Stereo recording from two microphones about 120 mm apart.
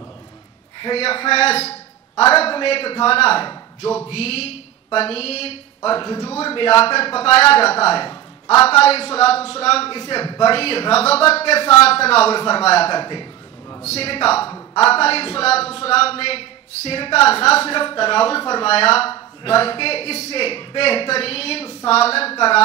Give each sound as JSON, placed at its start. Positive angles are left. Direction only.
{"t": 0.7, "sound": "a man's voice", "side_deg": 45}
{"t": 5.9, "sound": "a man's voice", "side_deg": 40}
{"t": 10.1, "sound": "a man's voice", "side_deg": 35}
{"t": 10.5, "sound": "a man's voice", "side_deg": 55}
{"t": 12.9, "sound": "a man's voice", "side_deg": 40}
{"t": 13.8, "sound": "a man's voice", "side_deg": 55}
{"t": 14.5, "sound": "a woman's voice", "side_deg": 30}
{"t": 14.9, "sound": "a man's voice", "side_deg": 55}